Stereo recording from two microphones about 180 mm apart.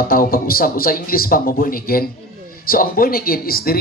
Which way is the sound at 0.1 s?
55° left (ahead or behind).